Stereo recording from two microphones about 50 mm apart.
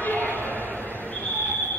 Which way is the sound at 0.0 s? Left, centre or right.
Left.